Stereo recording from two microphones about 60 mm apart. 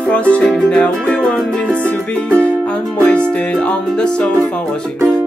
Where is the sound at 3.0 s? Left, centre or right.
Centre.